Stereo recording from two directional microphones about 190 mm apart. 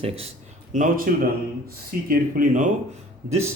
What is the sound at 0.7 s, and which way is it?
Speech, 45° right (ahead or behind).